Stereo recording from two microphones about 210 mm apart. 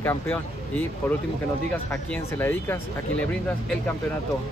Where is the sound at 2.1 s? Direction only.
10° left (ahead or behind).